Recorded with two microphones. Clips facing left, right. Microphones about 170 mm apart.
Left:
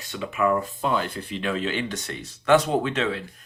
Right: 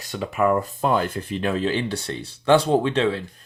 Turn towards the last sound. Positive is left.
turn(degrees=-30)  # may be behind; listen again after turning